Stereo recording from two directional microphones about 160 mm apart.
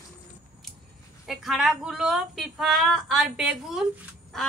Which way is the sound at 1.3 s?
Centre (ahead or behind).